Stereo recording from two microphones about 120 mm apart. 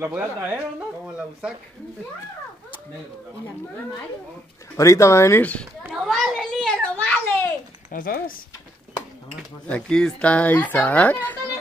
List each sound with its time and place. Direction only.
0.0 s speech: 15° right (ahead or behind)
4.7 s speech: 25° left (ahead or behind)
5.4 s speech: 10° left (ahead or behind)
5.9 s a sound: centre (ahead or behind)
7.9 s speech: 90° left
9.7 s speech: 10° left (ahead or behind)